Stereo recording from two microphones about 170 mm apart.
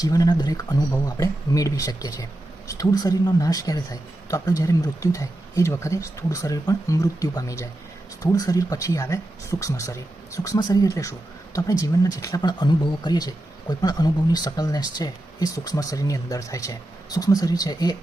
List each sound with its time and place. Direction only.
0.0 s speech: 20° left (ahead or behind)